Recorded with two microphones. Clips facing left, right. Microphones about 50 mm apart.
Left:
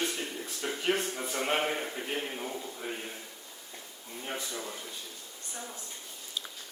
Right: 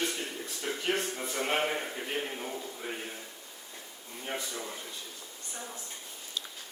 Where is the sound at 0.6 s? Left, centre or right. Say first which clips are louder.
Left 1 dB; centre.